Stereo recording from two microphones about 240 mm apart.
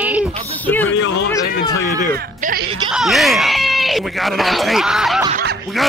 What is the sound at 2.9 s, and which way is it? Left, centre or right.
Speech, centre.